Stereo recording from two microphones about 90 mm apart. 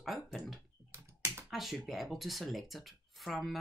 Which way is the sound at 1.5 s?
Centre (ahead or behind).